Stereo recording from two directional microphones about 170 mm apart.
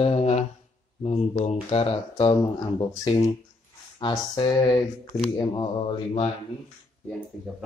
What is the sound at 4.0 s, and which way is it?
Speech, 25° left (ahead or behind).